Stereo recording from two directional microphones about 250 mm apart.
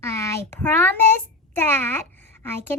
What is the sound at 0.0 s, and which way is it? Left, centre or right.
A child's voice, centre.